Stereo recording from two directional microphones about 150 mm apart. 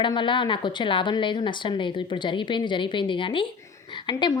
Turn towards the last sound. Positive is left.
turn(degrees=30)  # may be behind; listen again after turning